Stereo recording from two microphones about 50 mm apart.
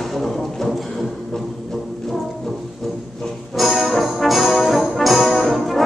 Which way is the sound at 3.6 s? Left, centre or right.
Centre.